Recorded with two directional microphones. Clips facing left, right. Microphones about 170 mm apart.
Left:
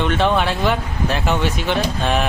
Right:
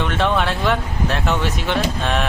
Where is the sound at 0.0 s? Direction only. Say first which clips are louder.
Left 2 dB; centre (ahead or behind).